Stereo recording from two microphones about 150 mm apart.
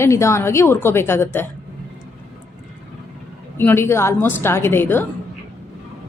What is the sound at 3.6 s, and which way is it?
A woman's voice, 15° left (ahead or behind).